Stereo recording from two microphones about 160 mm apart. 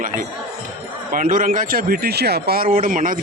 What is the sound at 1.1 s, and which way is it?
Speech, 55° right (ahead or behind).